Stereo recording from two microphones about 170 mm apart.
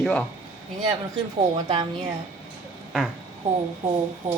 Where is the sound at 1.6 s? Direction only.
25° right (ahead or behind).